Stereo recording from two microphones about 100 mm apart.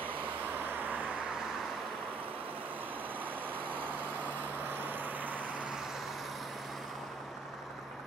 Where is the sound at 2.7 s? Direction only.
20° right (ahead or behind); by 6.3 s centre (ahead or behind).